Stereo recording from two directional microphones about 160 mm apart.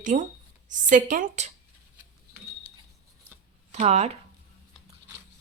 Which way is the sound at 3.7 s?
45° right (ahead or behind).